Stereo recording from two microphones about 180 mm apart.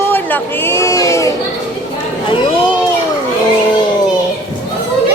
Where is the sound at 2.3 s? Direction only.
30° left (ahead or behind).